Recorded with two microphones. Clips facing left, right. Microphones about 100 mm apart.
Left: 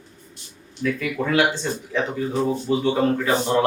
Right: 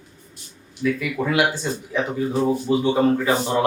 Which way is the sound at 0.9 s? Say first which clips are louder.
Left 3 dB; 5° right (ahead or behind).